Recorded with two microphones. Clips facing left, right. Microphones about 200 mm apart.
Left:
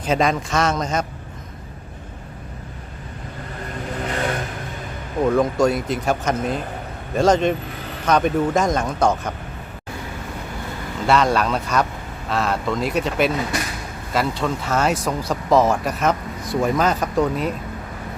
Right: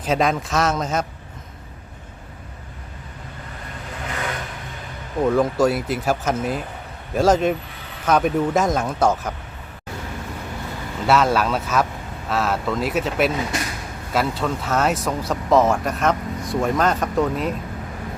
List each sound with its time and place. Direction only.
0.0 s speech: centre (ahead or behind)
4.1 s vehicle: 35° left (ahead or behind)
5.3 s speech: 5° right (ahead or behind)
11.0 s speech: 5° right (ahead or behind)